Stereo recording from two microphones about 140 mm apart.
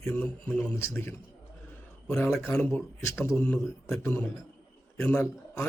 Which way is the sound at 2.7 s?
20° left (ahead or behind).